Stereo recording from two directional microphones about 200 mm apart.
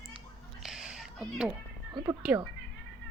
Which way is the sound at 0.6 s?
5° right (ahead or behind).